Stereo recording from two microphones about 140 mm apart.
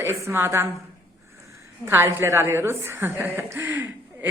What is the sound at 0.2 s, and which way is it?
A woman's voice, 20° right (ahead or behind).